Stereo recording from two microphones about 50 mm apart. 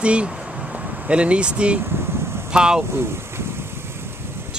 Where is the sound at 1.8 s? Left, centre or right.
Right.